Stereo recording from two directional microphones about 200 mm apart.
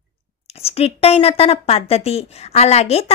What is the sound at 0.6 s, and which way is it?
A woman's voice, 30° left (ahead or behind).